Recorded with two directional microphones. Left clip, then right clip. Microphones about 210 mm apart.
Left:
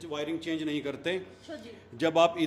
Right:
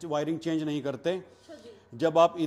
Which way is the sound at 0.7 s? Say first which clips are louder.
Right 2 dB; 70° right (ahead or behind).